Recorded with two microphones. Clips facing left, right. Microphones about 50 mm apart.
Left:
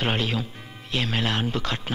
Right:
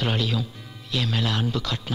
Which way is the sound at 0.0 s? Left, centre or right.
Left.